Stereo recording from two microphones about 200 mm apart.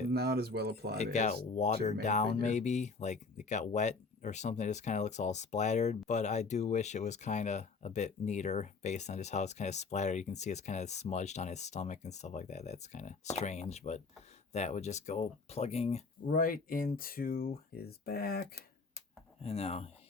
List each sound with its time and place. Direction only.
0.1 s speech: 50° right (ahead or behind)
0.9 s speech: 35° left (ahead or behind)
19.4 s speech: 30° left (ahead or behind)